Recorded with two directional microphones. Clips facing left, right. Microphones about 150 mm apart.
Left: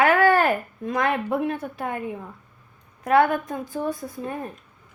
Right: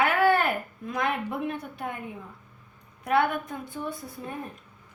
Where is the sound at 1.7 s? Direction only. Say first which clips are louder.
Left 5 dB; 90° left.